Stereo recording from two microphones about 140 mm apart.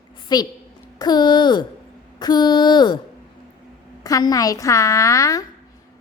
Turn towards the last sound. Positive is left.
turn(degrees=25)  # may be behind; listen again after turning